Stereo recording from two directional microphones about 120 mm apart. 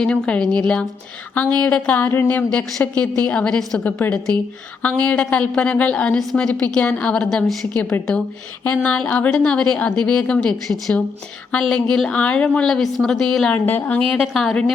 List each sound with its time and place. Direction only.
0.0 s a woman's voice: 5° left (ahead or behind)
7.8 s a woman's voice: 15° left (ahead or behind)
14.1 s a woman's voice: centre (ahead or behind)